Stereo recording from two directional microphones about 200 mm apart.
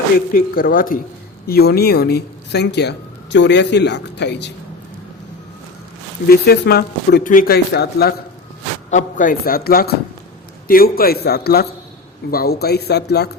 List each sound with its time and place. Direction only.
0.3 s speech: 45° left (ahead or behind)
6.2 s speech: 50° left (ahead or behind)
8.9 s speech: 40° left (ahead or behind)